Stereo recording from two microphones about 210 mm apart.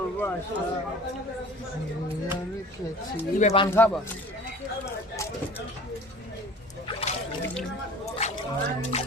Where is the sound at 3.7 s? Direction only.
10° left (ahead or behind).